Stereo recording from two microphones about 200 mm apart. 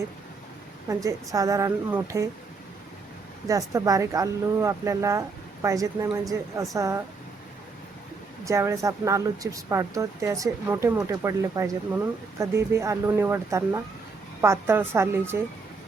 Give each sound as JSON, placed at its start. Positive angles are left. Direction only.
{"t": 0.9, "sound": "speech", "side_deg": -15}
{"t": 3.4, "sound": "speech", "side_deg": -15}
{"t": 8.4, "sound": "speech", "side_deg": -15}